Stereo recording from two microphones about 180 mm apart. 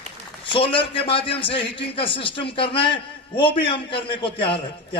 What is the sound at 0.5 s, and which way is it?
A man's voice, 30° left (ahead or behind).